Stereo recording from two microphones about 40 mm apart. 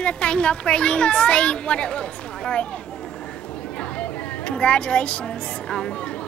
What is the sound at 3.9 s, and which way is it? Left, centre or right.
A woman's voice, left.